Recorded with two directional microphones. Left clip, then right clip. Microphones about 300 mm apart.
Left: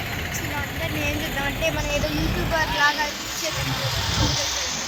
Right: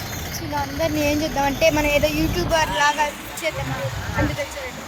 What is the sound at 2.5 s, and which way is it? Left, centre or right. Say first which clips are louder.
Speech: right 2 dB; right.